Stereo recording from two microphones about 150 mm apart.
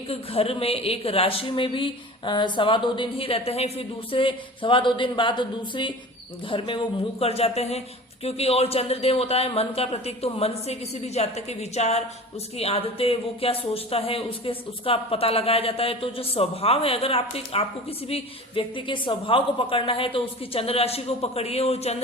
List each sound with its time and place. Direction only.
0.1 s speech: 40° left (ahead or behind)